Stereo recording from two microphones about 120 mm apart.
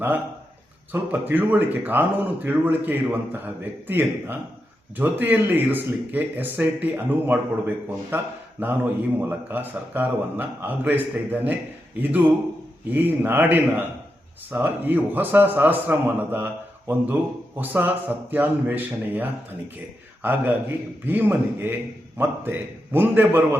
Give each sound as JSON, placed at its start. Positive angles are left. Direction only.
{"t": 0.9, "sound": "a man's voice", "side_deg": -15}
{"t": 12.9, "sound": "a man's voice", "side_deg": -15}